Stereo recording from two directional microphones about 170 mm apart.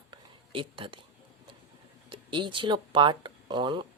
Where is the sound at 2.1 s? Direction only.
30° right (ahead or behind).